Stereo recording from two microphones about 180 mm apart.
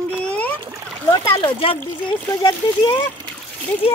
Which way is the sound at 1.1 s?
25° left (ahead or behind).